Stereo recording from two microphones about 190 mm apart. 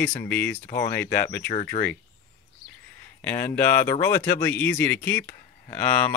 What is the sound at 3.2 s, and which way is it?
Speech, 10° left (ahead or behind).